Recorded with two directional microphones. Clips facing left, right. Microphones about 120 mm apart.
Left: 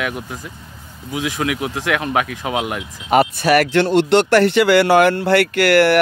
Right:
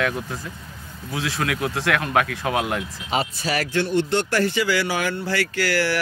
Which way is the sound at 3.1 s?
65° left (ahead or behind).